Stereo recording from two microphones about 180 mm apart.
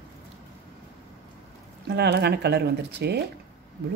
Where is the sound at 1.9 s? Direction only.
65° right (ahead or behind).